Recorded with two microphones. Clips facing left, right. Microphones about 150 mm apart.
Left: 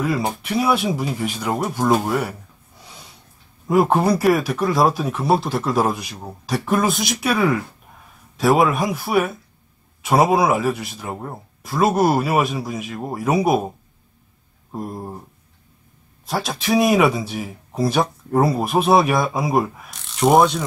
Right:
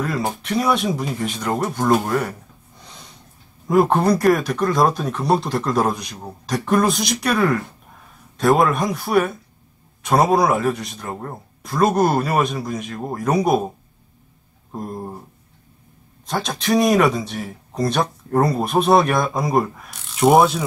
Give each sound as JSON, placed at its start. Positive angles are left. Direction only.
{"t": 0.0, "sound": "speech", "side_deg": 5}
{"t": 3.6, "sound": "speech", "side_deg": 5}
{"t": 14.7, "sound": "speech", "side_deg": 5}
{"t": 16.3, "sound": "speech", "side_deg": 5}